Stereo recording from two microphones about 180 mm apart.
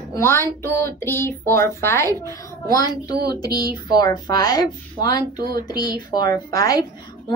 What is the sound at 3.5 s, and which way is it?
Speech, 60° right (ahead or behind).